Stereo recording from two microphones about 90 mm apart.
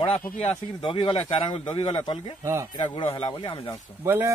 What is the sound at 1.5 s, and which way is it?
Speech, 65° left (ahead or behind).